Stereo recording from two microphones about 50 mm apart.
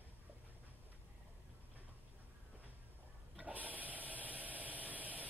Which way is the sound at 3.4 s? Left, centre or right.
Right.